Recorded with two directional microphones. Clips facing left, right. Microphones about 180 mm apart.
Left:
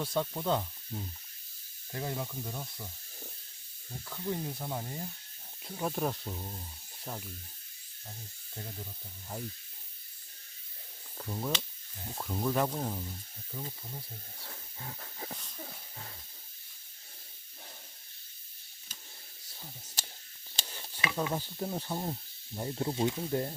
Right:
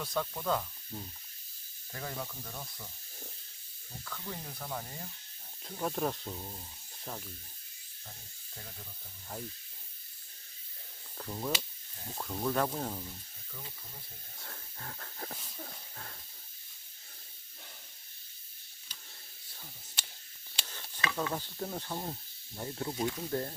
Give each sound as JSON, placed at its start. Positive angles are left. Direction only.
{"t": 0.0, "sound": "speech", "side_deg": 25}
{"t": 0.9, "sound": "sizzle", "side_deg": 10}
{"t": 1.9, "sound": "sizzle", "side_deg": 25}
{"t": 4.0, "sound": "speech", "side_deg": 20}
{"t": 5.6, "sound": "speech", "side_deg": 5}
{"t": 11.2, "sound": "speech", "side_deg": 0}
{"t": 13.5, "sound": "speech", "side_deg": 30}
{"t": 14.3, "sound": "wheeze", "side_deg": 5}
{"t": 15.4, "sound": "a sound", "side_deg": 0}
{"t": 20.7, "sound": "stir", "side_deg": 15}
{"t": 22.5, "sound": "speech", "side_deg": 20}